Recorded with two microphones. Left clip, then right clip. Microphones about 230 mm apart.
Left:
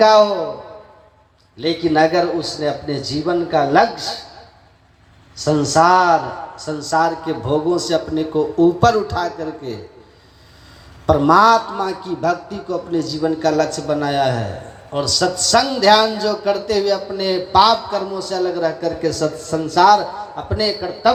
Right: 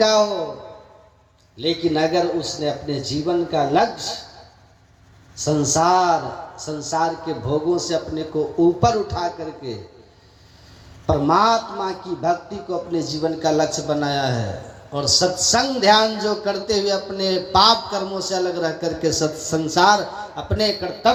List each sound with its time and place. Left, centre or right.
0.0 s a man's voice: left
1.6 s a man's voice: left
5.5 s a man's voice: left
11.0 s a man's voice: left
12.9 s a man's voice: centre
15.4 s speech: centre
16.4 s a man's voice: centre; by 21.1 s right